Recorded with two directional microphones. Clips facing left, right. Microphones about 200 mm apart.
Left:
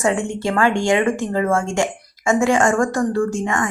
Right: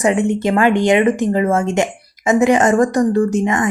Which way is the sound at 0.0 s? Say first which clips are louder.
Right 5 dB; 20° right (ahead or behind).